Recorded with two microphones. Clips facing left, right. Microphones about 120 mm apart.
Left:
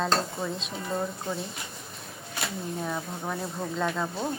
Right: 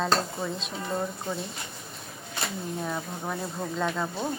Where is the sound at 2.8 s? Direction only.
Centre (ahead or behind).